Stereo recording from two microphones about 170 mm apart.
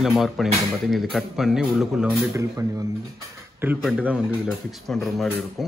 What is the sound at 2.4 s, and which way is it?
A man's voice, 20° right (ahead or behind).